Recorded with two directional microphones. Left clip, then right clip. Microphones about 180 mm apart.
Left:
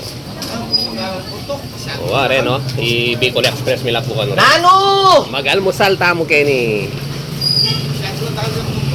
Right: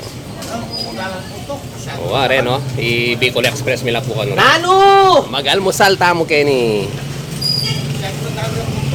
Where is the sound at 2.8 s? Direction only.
60° right (ahead or behind).